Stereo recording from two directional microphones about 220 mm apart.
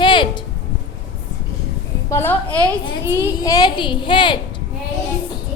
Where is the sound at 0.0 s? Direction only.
20° left (ahead or behind).